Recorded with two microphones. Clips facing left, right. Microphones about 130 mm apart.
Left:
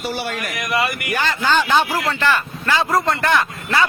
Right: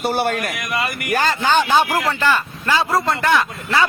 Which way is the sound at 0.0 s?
50° right (ahead or behind).